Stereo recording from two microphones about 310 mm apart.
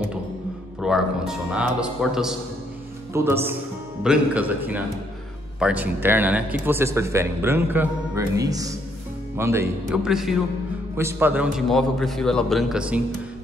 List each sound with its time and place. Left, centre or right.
0.7 s a man's voice: centre